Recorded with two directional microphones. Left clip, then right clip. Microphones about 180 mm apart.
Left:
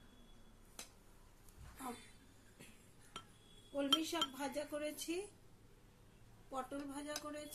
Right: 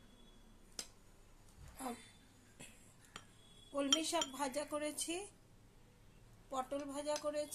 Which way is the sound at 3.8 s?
55° right (ahead or behind).